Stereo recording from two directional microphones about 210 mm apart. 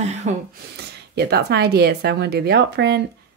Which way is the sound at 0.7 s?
50° right (ahead or behind).